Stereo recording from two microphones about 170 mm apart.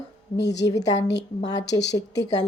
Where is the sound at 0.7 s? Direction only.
20° left (ahead or behind).